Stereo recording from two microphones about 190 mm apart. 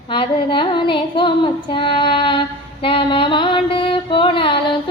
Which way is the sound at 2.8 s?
25° left (ahead or behind).